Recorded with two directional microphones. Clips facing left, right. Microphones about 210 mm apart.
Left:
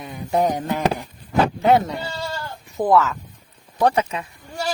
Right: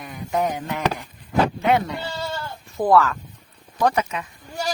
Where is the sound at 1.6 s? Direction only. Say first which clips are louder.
Left 3 dB; 35° left (ahead or behind).